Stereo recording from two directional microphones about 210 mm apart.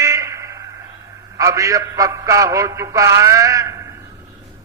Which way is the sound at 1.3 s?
15° right (ahead or behind).